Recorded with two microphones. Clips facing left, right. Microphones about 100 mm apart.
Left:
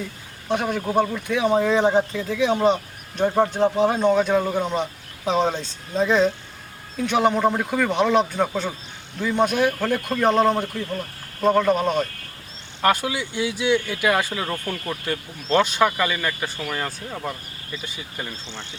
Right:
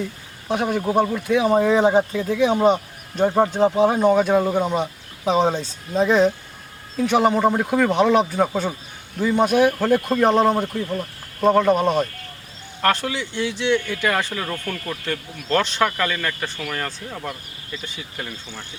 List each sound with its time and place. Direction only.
0.4 s speech: centre (ahead or behind)
12.8 s speech: 10° left (ahead or behind)